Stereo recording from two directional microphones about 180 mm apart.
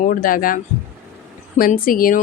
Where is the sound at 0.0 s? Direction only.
50° left (ahead or behind).